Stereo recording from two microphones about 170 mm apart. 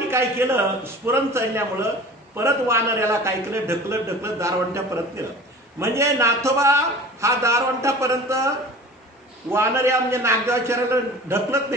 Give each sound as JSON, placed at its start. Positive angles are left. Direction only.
{"t": 0.1, "sound": "a man's voice", "side_deg": -15}
{"t": 9.5, "sound": "a man's voice", "side_deg": -15}